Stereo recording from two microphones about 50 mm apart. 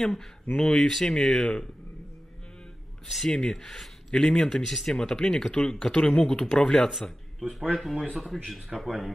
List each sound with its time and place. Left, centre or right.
0.0 s speech: centre
3.3 s a man's voice: centre